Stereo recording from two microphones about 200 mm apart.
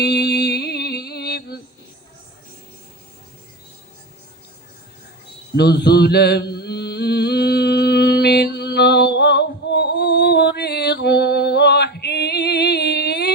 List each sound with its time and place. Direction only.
0.0 s music: 55° left (ahead or behind)
5.5 s mantra: 55° left (ahead or behind)